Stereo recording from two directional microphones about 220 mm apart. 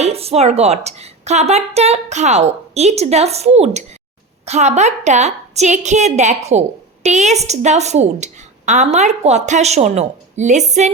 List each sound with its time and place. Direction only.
0.0 s a woman's voice: 25° right (ahead or behind)